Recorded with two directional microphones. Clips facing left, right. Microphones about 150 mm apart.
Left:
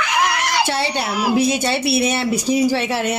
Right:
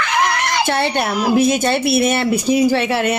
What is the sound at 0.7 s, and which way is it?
Speech, 55° right (ahead or behind).